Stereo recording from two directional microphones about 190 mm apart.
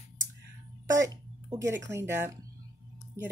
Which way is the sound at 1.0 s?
20° right (ahead or behind).